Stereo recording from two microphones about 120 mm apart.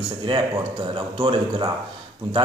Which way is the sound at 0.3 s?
45° right (ahead or behind).